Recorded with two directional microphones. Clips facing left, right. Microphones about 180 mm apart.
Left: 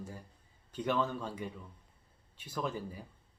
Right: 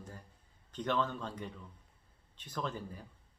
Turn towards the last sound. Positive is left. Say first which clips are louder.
# left 2 dB
turn(degrees=10)  # may be behind; listen again after turning